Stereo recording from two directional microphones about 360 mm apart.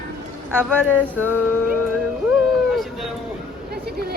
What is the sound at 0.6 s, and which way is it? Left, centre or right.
Speech, centre.